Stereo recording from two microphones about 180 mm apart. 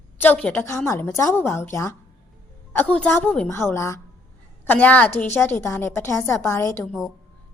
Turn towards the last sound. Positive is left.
turn(degrees=0)  # may be behind; listen again after turning